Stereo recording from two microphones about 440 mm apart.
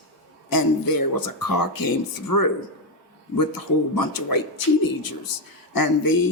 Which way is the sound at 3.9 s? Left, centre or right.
Left.